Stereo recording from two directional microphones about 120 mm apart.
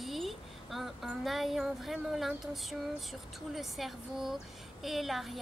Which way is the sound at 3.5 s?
Centre (ahead or behind).